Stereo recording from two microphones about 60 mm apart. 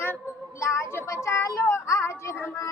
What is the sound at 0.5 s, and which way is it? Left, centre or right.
Speech, left.